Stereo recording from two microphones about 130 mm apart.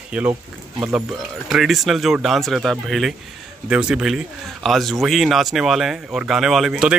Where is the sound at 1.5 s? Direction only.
Centre (ahead or behind).